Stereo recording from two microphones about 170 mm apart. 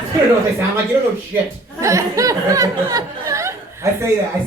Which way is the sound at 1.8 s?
20° right (ahead or behind).